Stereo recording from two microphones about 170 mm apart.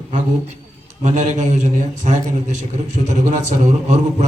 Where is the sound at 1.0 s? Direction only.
45° right (ahead or behind).